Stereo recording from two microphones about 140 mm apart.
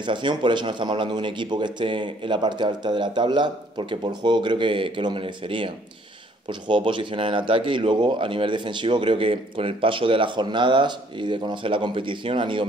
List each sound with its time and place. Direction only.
0.0 s speech: 35° right (ahead or behind)
6.7 s speech: 40° right (ahead or behind)